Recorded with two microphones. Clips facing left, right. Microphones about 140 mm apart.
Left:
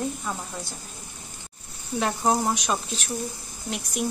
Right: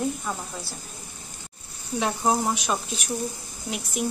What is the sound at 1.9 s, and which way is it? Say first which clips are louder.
Speech: even; centre (ahead or behind).